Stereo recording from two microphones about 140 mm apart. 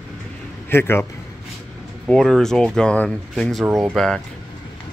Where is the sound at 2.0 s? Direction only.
5° left (ahead or behind).